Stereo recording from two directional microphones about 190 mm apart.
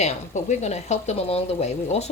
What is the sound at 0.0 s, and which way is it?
A woman's voice, 35° left (ahead or behind).